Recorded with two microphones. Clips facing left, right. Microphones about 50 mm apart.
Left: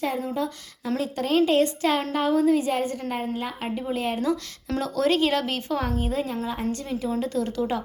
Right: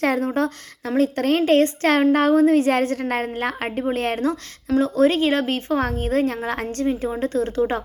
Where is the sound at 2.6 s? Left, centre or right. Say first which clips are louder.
Right 6 dB; right.